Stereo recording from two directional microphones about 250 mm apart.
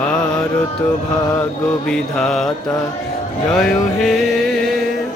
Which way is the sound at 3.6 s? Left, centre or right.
Centre.